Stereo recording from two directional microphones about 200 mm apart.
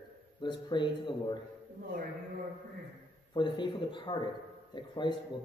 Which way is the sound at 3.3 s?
25° left (ahead or behind).